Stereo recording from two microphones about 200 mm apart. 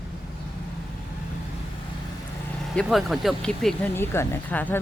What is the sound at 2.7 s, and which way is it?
Speech, centre (ahead or behind).